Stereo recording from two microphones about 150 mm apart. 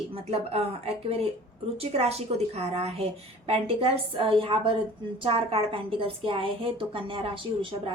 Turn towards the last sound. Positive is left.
turn(degrees=-35)  # may be behind; listen again after turning